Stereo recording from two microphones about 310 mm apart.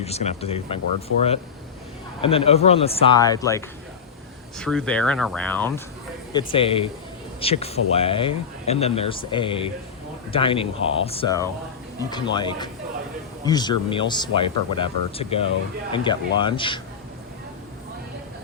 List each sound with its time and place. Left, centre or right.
0.0 s speech: left
6.3 s speech: centre